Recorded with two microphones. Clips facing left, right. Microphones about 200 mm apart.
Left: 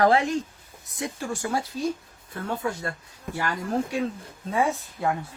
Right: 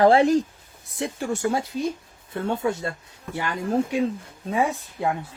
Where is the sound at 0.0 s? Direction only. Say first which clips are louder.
Right 5 dB; 30° right (ahead or behind).